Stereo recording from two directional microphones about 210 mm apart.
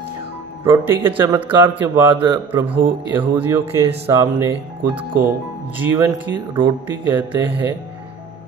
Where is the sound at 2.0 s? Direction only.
20° right (ahead or behind).